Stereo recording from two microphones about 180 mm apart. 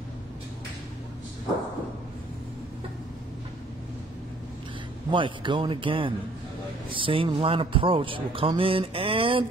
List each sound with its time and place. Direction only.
5.1 s a man's voice: 25° right (ahead or behind)